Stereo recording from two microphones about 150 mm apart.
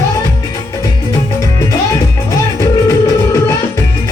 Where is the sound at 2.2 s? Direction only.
20° left (ahead or behind).